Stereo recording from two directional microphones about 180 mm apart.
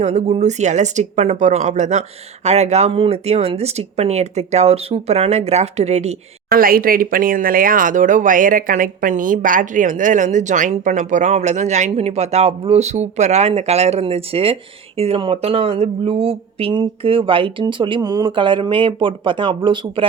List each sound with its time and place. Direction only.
0.0 s speech: 40° right (ahead or behind)
6.5 s speech: 55° right (ahead or behind); by 20.1 s 25° right (ahead or behind)